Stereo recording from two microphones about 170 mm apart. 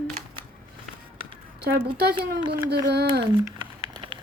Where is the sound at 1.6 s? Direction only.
70° right (ahead or behind).